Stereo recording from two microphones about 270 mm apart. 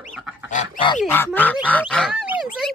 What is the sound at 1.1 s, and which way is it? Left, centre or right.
Speech, centre.